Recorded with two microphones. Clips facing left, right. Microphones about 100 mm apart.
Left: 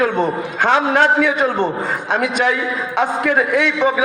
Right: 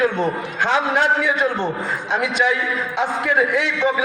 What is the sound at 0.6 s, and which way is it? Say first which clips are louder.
A man's voice: left 4 dB; 75° left (ahead or behind).